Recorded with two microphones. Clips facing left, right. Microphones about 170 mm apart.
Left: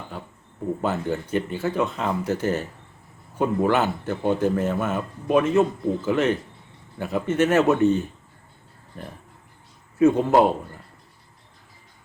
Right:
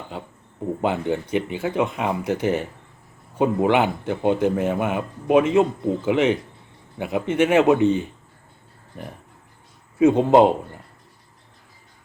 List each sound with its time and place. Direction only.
0.8 s speech: 15° right (ahead or behind)
10.0 s a man's voice: 20° right (ahead or behind)